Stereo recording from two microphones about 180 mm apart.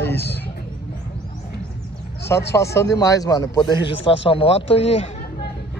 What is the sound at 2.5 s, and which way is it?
A man's voice, 15° left (ahead or behind).